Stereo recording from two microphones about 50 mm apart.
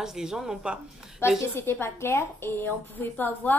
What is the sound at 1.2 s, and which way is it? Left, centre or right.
A woman's voice, left.